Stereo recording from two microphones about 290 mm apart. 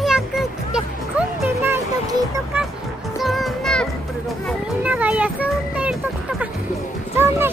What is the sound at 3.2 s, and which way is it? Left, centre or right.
Music, centre.